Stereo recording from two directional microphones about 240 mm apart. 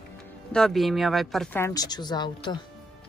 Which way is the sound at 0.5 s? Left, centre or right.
Centre.